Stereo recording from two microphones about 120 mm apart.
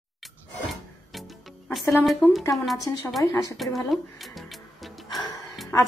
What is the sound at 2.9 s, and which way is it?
Speech, 25° left (ahead or behind).